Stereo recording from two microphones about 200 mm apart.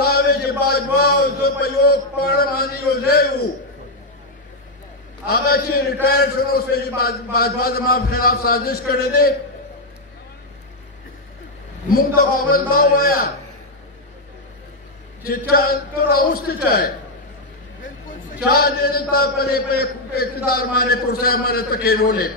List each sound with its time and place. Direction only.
0.0 s a sound: 50° left (ahead or behind)
5.3 s a man's voice: 50° left (ahead or behind)
12.2 s a man's voice: 45° left (ahead or behind)
15.2 s a man's voice: 50° left (ahead or behind)
18.5 s a man's voice: 50° left (ahead or behind)